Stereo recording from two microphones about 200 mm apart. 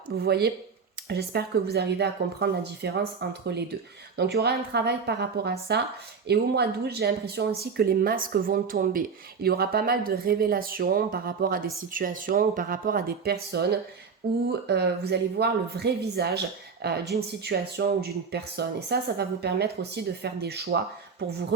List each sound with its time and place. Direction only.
0.1 s a woman's voice: 50° right (ahead or behind)